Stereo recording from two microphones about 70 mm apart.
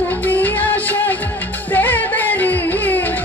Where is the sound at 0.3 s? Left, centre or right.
Left.